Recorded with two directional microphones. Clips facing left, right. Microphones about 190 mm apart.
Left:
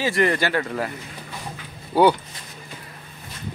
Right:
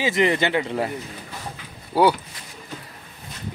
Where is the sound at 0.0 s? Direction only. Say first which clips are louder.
Right 1 dB; 20° right (ahead or behind).